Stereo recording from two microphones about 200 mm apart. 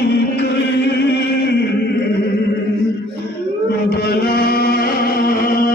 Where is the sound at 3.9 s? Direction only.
50° left (ahead or behind).